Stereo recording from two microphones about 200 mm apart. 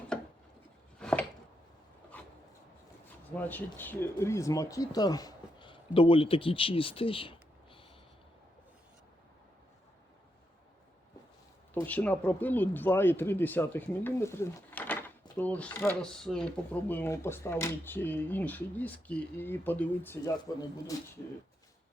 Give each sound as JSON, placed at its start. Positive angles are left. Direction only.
{"t": 0.9, "sound": "a sound", "side_deg": 5}
{"t": 3.8, "sound": "speech", "side_deg": 10}
{"t": 11.7, "sound": "speech", "side_deg": 10}